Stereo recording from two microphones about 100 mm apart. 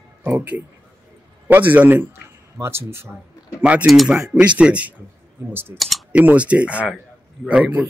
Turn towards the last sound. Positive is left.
turn(degrees=-15)  # may be behind; listen again after turning